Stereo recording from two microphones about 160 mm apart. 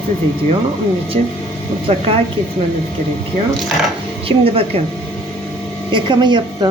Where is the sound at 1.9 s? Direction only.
35° right (ahead or behind).